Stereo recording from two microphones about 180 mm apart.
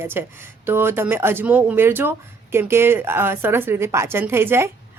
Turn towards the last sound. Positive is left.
turn(degrees=-15)  # may be behind; listen again after turning